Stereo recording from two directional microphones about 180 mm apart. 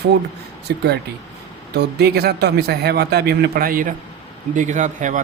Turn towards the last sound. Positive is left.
turn(degrees=-45)  # may be behind; listen again after turning